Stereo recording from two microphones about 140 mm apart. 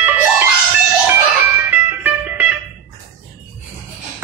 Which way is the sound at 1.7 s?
10° right (ahead or behind).